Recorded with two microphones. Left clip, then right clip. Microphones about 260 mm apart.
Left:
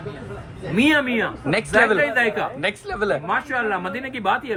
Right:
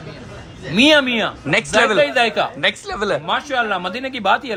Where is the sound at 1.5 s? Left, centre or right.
Centre.